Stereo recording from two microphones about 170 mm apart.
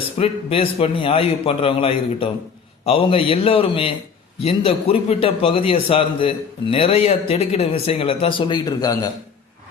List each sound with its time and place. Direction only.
0.2 s a man's voice: 35° left (ahead or behind)